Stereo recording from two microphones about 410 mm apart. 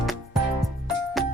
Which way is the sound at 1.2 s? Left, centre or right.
Centre.